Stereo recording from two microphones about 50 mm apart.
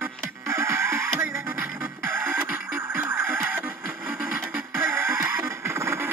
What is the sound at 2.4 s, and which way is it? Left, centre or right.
Music, right.